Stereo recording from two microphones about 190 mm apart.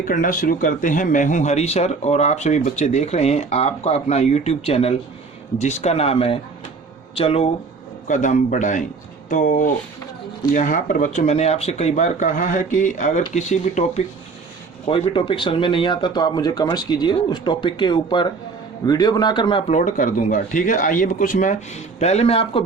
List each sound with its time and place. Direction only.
0.0 s speech: 45° left (ahead or behind); by 22.6 s 30° left (ahead or behind)